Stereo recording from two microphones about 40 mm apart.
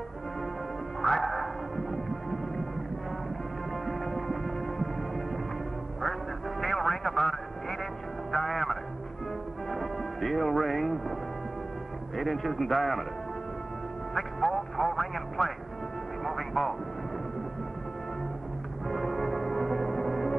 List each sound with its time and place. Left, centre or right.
1.0 s whale vocalization: centre
3.8 s music: centre
6.6 s music: centre
12.2 s a man's voice: centre
14.1 s music: centre
18.9 s music: centre